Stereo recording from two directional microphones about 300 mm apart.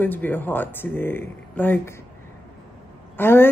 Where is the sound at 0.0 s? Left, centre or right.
Centre.